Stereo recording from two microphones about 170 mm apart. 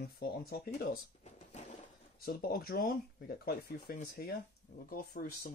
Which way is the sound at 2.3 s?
60° left (ahead or behind).